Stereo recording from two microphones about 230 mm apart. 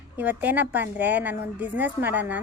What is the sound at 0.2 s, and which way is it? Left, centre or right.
A woman's voice, centre.